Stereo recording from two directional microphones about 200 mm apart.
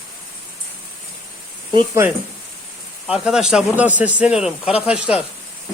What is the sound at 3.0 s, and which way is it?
Speech, 5° right (ahead or behind).